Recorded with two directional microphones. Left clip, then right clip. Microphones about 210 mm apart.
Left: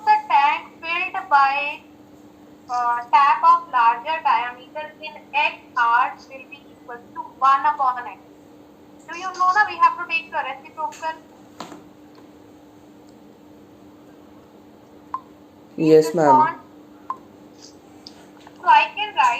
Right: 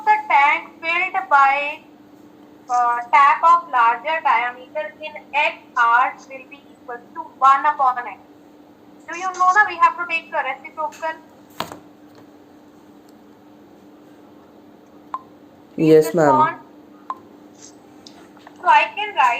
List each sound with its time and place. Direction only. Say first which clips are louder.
0.0 s child singing: right 1 dB; 20° right (ahead or behind)
2.7 s a child's voice: right 2 dB; 15° right (ahead or behind)
9.1 s a child's voice: right 3 dB; 15° right (ahead or behind)
15.8 s a woman's voice: right 1 dB; 25° right (ahead or behind)
18.6 s a child's voice: even; 15° right (ahead or behind)